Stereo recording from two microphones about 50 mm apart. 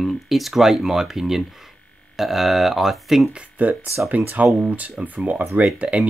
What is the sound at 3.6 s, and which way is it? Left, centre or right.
Speech, right.